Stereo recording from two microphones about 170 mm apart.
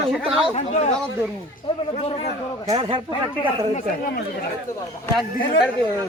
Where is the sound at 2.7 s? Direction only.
35° right (ahead or behind).